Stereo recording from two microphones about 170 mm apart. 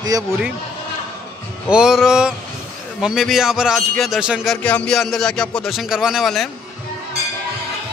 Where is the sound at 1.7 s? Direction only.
5° right (ahead or behind).